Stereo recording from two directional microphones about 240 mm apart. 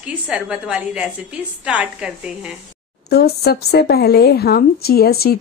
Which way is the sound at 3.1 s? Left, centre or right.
Left.